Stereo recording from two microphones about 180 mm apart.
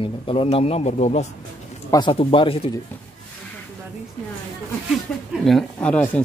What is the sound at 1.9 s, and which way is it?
Speech, 25° left (ahead or behind).